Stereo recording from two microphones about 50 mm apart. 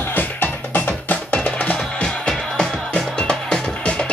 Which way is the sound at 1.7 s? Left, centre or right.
Centre.